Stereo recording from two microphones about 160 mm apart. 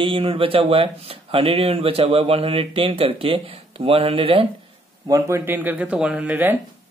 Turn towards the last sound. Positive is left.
turn(degrees=-10)  # may be behind; listen again after turning